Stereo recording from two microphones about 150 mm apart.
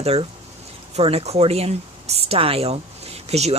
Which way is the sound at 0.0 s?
45° right (ahead or behind).